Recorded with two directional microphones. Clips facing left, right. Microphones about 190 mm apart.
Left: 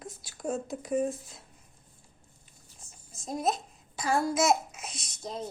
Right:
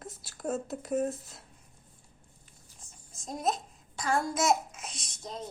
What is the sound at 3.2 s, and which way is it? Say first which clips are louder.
Speech: left 2 dB; centre (ahead or behind).